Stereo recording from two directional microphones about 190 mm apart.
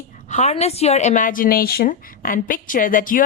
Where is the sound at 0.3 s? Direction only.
35° left (ahead or behind).